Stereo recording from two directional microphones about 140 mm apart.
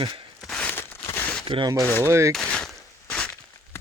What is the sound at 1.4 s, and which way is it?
Speech, 40° right (ahead or behind).